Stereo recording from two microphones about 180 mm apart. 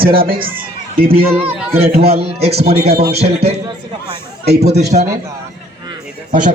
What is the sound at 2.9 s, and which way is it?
Speech, 60° right (ahead or behind).